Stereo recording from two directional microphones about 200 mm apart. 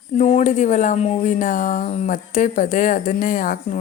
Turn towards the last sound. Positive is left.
turn(degrees=40)  # may be behind; listen again after turning